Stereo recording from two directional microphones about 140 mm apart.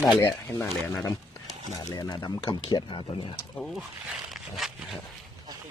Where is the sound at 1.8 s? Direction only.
30° left (ahead or behind).